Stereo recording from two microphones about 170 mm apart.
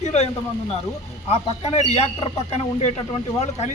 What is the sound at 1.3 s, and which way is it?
A man's voice, 40° left (ahead or behind).